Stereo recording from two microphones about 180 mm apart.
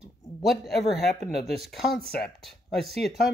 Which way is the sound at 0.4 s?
Centre (ahead or behind).